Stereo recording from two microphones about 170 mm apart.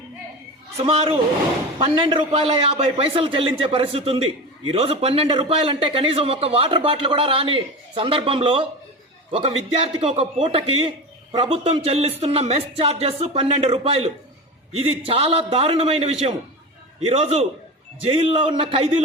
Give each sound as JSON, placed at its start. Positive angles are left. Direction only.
{"t": 0.8, "sound": "speech", "side_deg": -35}